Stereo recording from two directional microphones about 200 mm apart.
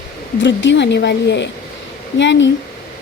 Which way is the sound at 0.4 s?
65° left (ahead or behind).